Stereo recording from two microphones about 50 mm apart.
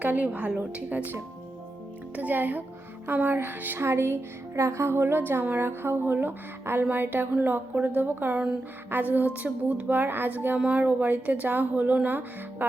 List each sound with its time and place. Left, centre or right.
0.0 s a woman's voice: right
2.1 s speech: right
3.8 s speech: right